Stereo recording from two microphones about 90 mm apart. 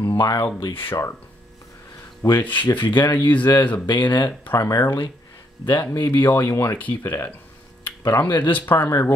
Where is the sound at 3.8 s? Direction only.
55° left (ahead or behind).